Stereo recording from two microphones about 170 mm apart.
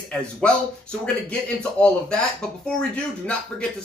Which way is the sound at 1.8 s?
5° left (ahead or behind).